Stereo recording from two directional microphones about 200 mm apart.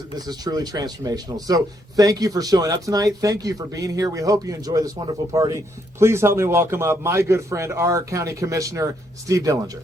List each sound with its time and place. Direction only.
0.3 s a man's voice: 20° right (ahead or behind)